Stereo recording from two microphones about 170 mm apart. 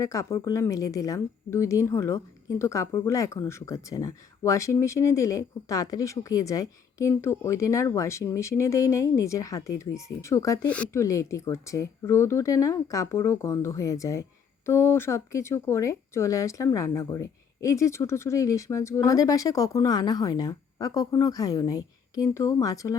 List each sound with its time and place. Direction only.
0.0 s speech: 20° left (ahead or behind)
10.7 s speech: 5° left (ahead or behind)
11.0 s speech: 20° left (ahead or behind)